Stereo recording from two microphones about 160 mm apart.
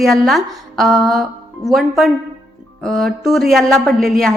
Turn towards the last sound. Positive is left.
turn(degrees=0)  # may be behind; listen again after turning